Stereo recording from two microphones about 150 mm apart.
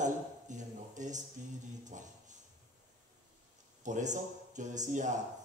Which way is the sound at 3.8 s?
55° right (ahead or behind).